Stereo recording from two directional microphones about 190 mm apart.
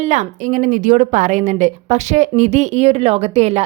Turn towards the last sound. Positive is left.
turn(degrees=-35)  # may be behind; listen again after turning